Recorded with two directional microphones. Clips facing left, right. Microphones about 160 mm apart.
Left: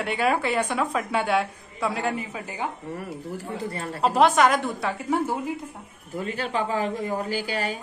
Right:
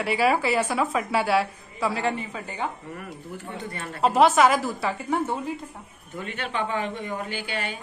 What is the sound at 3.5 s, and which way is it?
Speech, 30° left (ahead or behind).